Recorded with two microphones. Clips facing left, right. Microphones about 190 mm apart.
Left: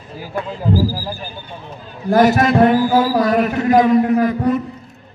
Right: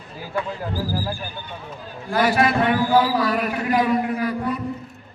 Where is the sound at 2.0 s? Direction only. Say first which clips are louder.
Left 6 dB; 45° left (ahead or behind).